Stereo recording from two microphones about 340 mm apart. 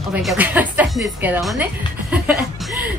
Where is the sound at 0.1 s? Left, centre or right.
Centre.